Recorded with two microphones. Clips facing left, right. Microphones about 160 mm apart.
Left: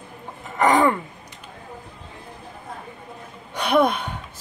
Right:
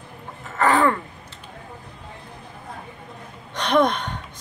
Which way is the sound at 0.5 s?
15° left (ahead or behind).